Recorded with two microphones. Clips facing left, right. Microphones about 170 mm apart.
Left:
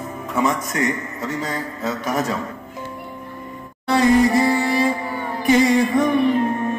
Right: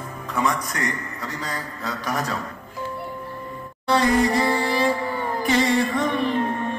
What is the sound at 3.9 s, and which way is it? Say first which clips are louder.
Music: left 4 dB; 25° left (ahead or behind).